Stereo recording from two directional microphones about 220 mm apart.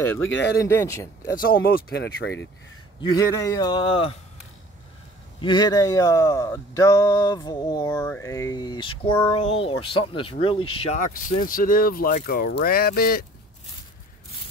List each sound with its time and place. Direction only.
0.2 s speech: 55° left (ahead or behind)
0.6 s a sound: 15° left (ahead or behind)
1.3 s speech: 40° left (ahead or behind)
3.0 s speech: 15° left (ahead or behind)
5.4 s a sound: 20° left (ahead or behind)
9.3 s speech: 25° left (ahead or behind); by 13.2 s 45° left (ahead or behind)